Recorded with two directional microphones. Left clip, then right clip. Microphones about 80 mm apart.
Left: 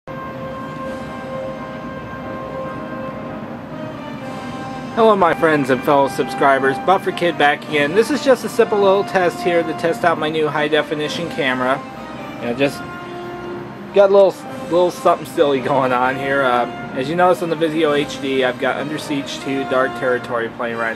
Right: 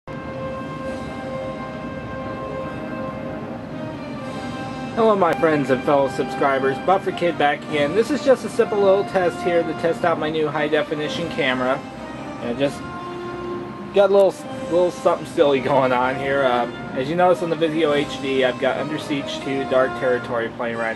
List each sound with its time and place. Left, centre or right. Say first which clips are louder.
4.9 s speech: left 4 dB; left
13.9 s speech: left 4 dB; left